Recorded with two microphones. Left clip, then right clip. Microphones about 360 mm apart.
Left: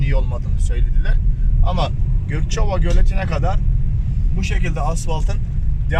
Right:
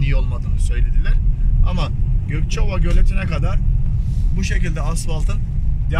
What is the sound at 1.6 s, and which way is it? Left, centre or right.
Speech, left.